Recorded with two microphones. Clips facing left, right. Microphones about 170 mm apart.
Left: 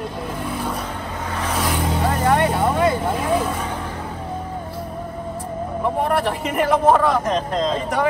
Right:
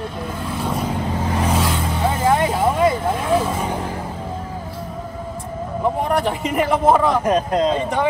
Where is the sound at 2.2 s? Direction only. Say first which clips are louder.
Right 1 dB; 10° right (ahead or behind).